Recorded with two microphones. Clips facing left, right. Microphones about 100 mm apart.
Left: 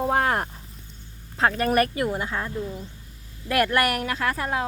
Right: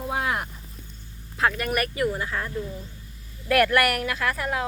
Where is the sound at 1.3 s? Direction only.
30° left (ahead or behind).